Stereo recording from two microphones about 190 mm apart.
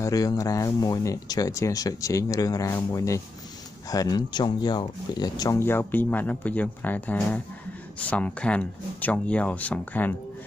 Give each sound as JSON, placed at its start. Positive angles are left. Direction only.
{"t": 0.0, "sound": "speech", "side_deg": 20}